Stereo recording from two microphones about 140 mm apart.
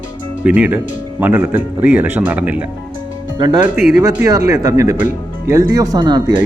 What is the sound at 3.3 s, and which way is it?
Speech, 30° right (ahead or behind).